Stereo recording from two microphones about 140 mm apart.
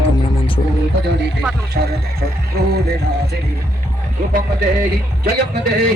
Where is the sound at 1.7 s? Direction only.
90° right.